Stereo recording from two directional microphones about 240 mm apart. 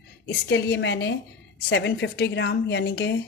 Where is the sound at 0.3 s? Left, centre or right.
Left.